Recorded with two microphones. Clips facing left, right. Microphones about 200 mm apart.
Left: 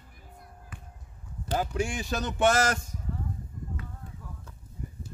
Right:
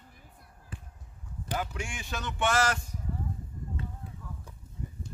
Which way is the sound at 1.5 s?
35° left (ahead or behind).